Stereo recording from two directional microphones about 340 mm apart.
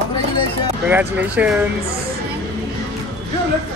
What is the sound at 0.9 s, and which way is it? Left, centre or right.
Speech, centre.